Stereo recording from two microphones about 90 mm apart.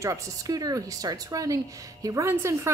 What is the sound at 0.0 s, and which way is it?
A woman's voice, 40° right (ahead or behind).